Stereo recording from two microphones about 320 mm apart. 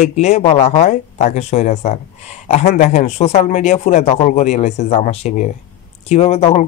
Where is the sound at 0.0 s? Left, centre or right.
Left.